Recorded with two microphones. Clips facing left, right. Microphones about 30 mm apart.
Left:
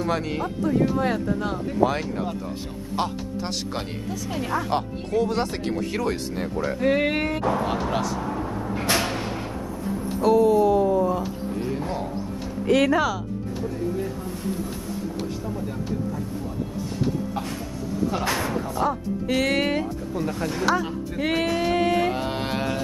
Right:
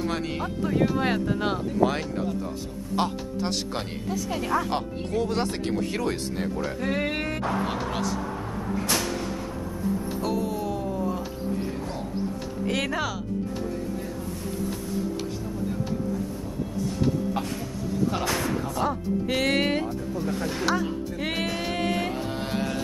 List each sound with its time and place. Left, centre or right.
0.0 s speech: centre
0.9 s speech: right
3.0 s speech: centre
6.8 s speech: centre
8.8 s a sound: left
10.2 s speech: centre
12.6 s speech: centre
18.3 s speech: centre
18.8 s speech: centre
22.1 s music: left
22.5 s music: left